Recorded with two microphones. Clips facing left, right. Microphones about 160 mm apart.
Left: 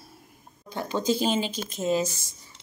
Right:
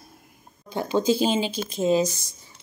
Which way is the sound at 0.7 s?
25° right (ahead or behind).